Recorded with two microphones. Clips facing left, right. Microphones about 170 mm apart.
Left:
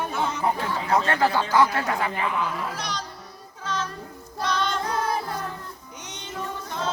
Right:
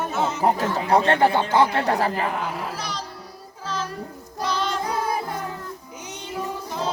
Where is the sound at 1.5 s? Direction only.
30° right (ahead or behind).